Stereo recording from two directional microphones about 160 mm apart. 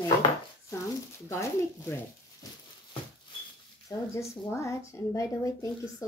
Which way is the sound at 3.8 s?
20° left (ahead or behind).